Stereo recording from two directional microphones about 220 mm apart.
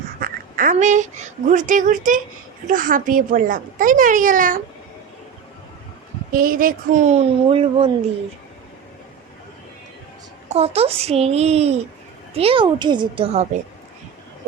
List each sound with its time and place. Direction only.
0.2 s speech: 40° right (ahead or behind)
6.3 s speech: 40° right (ahead or behind)
10.5 s a child's voice: 30° right (ahead or behind)